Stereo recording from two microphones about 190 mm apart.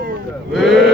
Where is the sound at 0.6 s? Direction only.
Centre (ahead or behind).